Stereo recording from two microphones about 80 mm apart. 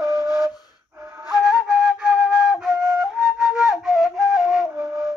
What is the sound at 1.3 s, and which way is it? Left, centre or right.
Flute, centre.